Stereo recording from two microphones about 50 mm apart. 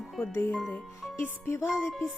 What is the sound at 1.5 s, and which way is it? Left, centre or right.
Speech, left.